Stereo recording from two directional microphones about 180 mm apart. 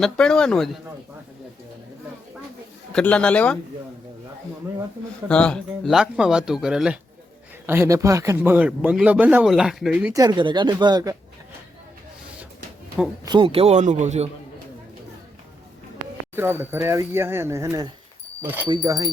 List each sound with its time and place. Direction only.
0.0 s speech: 5° left (ahead or behind)
2.9 s a man's voice: 5° left (ahead or behind)
5.3 s speech: 5° left (ahead or behind)
10.2 s speech: 25° right (ahead or behind)
13.2 s a man's voice: 30° right (ahead or behind)
16.3 s speech: 10° right (ahead or behind)
18.7 s speech: 20° right (ahead or behind)